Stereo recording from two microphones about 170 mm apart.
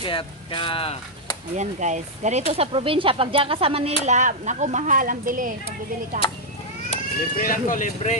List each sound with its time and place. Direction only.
0.0 s speech: 30° left (ahead or behind)
1.6 s speech: 45° right (ahead or behind)
4.0 s speech: 45° right (ahead or behind)
6.9 s speech: 50° left (ahead or behind)